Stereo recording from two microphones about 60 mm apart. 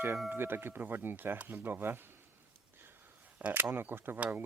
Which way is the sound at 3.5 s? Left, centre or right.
Right.